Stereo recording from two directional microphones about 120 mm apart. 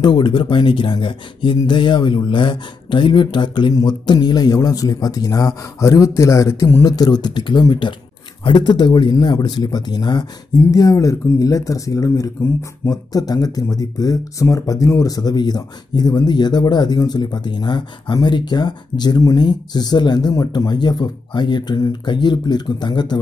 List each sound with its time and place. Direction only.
0.0 s speech: 40° left (ahead or behind)